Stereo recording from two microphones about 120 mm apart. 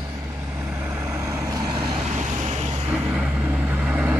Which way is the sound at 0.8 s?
20° right (ahead or behind).